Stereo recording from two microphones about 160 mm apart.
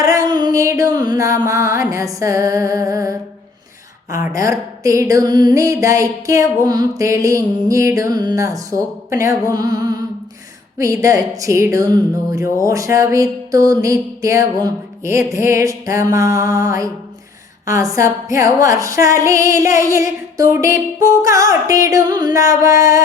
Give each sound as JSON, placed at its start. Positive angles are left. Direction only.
{"t": 0.0, "sound": "a woman's voice", "side_deg": -20}